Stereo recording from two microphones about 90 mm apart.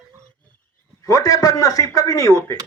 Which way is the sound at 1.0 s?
40° left (ahead or behind).